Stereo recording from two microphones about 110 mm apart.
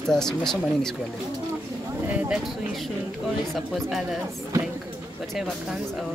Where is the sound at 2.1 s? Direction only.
15° right (ahead or behind).